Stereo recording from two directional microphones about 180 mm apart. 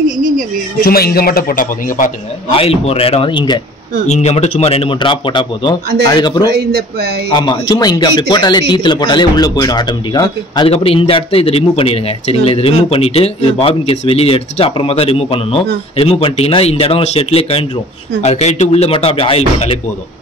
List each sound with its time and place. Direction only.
0.8 s a man's voice: 55° left (ahead or behind)
2.5 s speech: 35° left (ahead or behind)
4.1 s speech: 40° left (ahead or behind); by 6.5 s 20° left (ahead or behind)
6.5 s speech: 60° right (ahead or behind)
7.3 s speech: 25° left (ahead or behind)